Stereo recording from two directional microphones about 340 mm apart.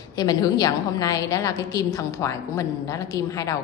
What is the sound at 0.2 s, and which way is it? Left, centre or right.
A woman's voice, centre.